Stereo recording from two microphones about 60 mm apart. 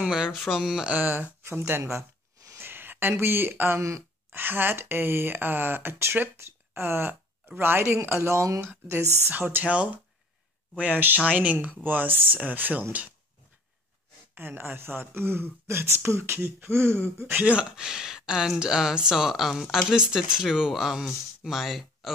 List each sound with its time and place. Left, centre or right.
0.0 s speech: centre
0.3 s speech: centre
0.8 s speech: right
1.9 s a sound: right
2.7 s speech: right
9.2 s speech: right
14.3 s speech: right
17.5 s speech: centre